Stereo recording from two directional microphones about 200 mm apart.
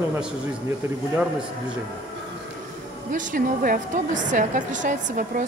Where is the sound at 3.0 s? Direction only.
40° right (ahead or behind).